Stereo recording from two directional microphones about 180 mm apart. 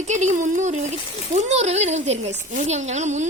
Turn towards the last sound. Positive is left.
turn(degrees=-40)  # may be behind; listen again after turning